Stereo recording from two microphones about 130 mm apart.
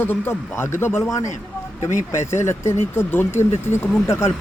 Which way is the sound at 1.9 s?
75° left (ahead or behind).